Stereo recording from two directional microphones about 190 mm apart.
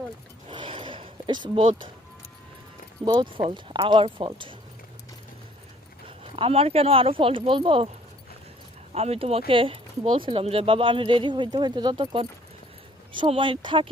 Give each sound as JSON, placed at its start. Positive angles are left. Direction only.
{"t": 0.4, "sound": "a sound", "side_deg": -25}
{"t": 3.0, "sound": "speech", "side_deg": -20}
{"t": 6.1, "sound": "speech", "side_deg": -30}
{"t": 9.0, "sound": "speech", "side_deg": -30}